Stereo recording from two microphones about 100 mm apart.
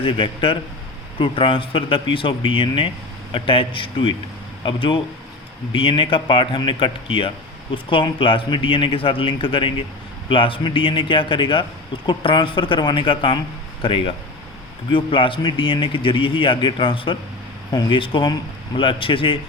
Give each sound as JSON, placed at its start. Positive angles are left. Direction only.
{"t": 0.0, "sound": "speech", "side_deg": 60}
{"t": 17.7, "sound": "speech", "side_deg": 45}